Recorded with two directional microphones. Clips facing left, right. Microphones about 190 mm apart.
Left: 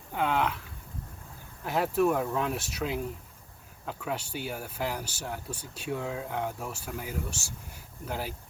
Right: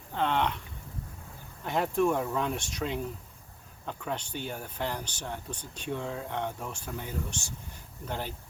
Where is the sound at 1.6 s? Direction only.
5° left (ahead or behind).